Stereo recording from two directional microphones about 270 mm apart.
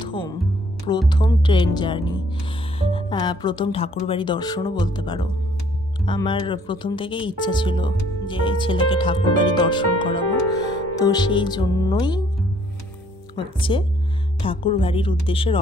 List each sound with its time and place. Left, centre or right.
0.0 s music: centre
0.8 s speech: centre
13.6 s speech: centre